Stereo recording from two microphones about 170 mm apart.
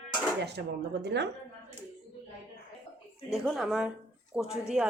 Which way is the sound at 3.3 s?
Centre (ahead or behind).